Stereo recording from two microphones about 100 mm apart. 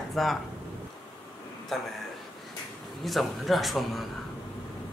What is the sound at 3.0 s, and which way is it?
Speech, centre (ahead or behind).